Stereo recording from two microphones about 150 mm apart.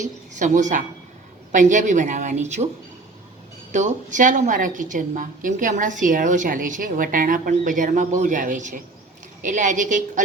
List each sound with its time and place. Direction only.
0.0 s a woman's voice: 55° right (ahead or behind)
3.7 s a woman's voice: 55° right (ahead or behind)